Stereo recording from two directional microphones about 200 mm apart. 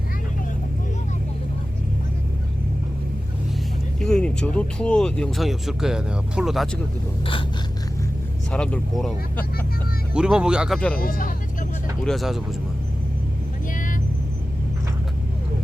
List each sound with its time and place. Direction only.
4.0 s speech: 5° left (ahead or behind)
8.5 s speech: 5° left (ahead or behind)
10.9 s speech: 45° left (ahead or behind)
12.0 s speech: centre (ahead or behind)